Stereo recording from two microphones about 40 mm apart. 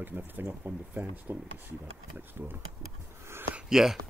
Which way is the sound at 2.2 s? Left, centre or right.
Right.